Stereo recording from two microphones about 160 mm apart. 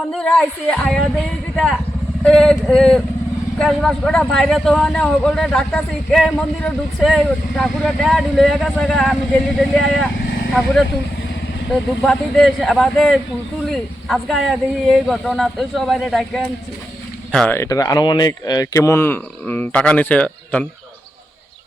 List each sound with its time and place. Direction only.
0.1 s speech: 5° left (ahead or behind)
2.2 s speech: 5° left (ahead or behind)
12.0 s speech: centre (ahead or behind)
17.6 s speech: 20° left (ahead or behind)